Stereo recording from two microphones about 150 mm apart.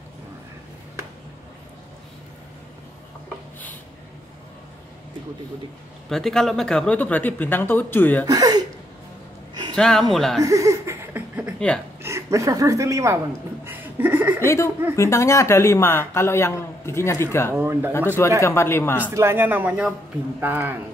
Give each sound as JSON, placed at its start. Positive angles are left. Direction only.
{"t": 6.0, "sound": "speech", "side_deg": 0}
{"t": 8.3, "sound": "speech", "side_deg": -25}
{"t": 9.5, "sound": "music", "side_deg": -25}
{"t": 9.8, "sound": "speech", "side_deg": 5}
{"t": 10.4, "sound": "laughter", "side_deg": -20}
{"t": 12.0, "sound": "a woman's voice", "side_deg": -20}
{"t": 13.7, "sound": "chuckle", "side_deg": -10}
{"t": 14.4, "sound": "speech", "side_deg": 15}
{"t": 17.6, "sound": "speech", "side_deg": -15}
{"t": 18.4, "sound": "speech", "side_deg": 15}
{"t": 19.0, "sound": "speech", "side_deg": -15}